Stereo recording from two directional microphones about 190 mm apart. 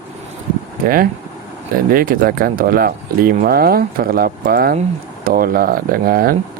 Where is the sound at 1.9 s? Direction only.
50° right (ahead or behind).